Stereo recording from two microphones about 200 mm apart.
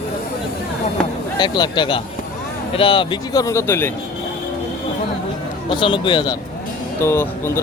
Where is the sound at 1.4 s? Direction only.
20° left (ahead or behind).